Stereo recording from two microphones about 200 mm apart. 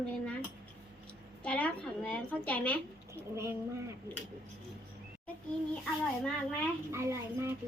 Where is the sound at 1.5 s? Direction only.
5° left (ahead or behind).